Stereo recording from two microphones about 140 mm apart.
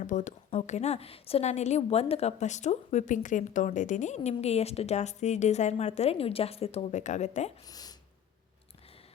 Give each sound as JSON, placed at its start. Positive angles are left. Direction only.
{"t": 0.0, "sound": "speech", "side_deg": 65}
{"t": 0.5, "sound": "a woman's voice", "side_deg": 50}
{"t": 7.7, "sound": "a sound", "side_deg": 25}